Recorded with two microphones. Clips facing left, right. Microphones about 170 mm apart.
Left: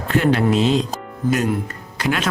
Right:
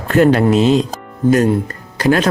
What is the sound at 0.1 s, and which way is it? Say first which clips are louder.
Speech: right 6 dB; 45° right (ahead or behind).